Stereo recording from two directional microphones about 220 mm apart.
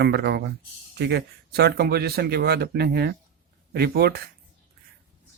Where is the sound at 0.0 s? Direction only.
50° right (ahead or behind).